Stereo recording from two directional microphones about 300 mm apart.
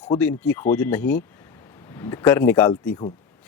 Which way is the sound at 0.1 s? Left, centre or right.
Centre.